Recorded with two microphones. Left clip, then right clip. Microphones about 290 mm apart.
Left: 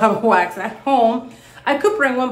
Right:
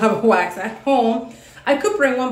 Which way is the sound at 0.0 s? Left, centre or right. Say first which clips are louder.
Left 1 dB; centre.